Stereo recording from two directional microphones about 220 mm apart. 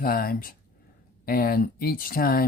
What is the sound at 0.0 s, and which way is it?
Speech, 40° left (ahead or behind).